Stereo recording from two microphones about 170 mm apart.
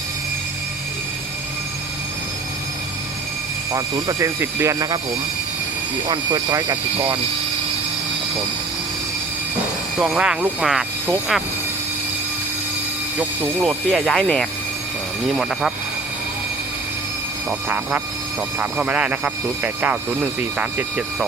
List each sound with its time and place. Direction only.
3.7 s speech: 20° right (ahead or behind)
6.1 s speech: 25° right (ahead or behind)
10.0 s speech: 5° right (ahead or behind)
13.1 s speech: 10° right (ahead or behind)
13.9 s speech: 5° left (ahead or behind)
18.6 s speech: 5° right (ahead or behind)